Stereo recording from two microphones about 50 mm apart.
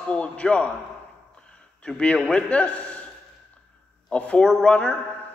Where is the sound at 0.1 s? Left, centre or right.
Left.